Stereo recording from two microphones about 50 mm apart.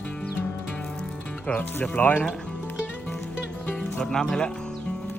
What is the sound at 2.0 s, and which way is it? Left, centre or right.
Speech, left.